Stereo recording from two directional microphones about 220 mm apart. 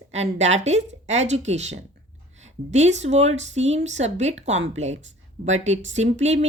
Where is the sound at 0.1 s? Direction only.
30° right (ahead or behind).